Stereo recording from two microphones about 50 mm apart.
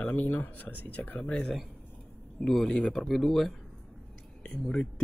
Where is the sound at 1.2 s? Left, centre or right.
Left.